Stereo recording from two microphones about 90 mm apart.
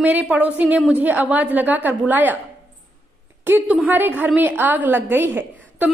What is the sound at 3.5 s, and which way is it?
A woman's voice, 20° right (ahead or behind).